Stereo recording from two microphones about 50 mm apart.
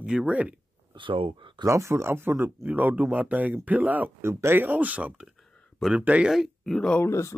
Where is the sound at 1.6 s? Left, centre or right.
Right.